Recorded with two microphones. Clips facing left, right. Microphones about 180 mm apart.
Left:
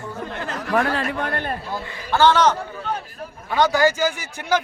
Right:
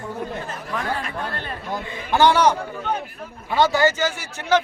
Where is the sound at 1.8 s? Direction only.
15° right (ahead or behind).